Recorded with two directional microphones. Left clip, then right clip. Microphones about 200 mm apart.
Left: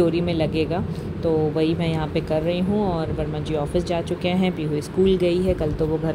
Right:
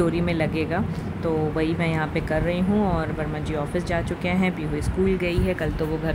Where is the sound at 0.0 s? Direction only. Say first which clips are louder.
Left 3 dB; 5° right (ahead or behind).